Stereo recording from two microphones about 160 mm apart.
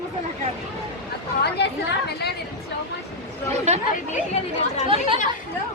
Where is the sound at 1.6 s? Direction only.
90° left.